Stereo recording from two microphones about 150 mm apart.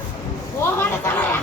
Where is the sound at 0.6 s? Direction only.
15° left (ahead or behind).